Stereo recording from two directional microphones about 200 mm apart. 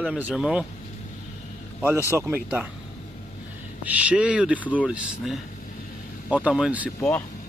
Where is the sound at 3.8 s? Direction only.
5° right (ahead or behind).